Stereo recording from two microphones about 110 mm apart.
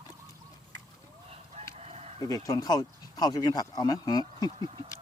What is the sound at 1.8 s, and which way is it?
Chicken, 80° right.